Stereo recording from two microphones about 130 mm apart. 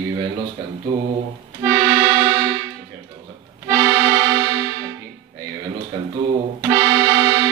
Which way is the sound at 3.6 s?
20° right (ahead or behind).